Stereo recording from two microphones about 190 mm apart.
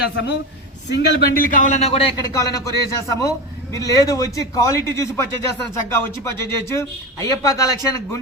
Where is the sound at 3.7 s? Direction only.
15° left (ahead or behind).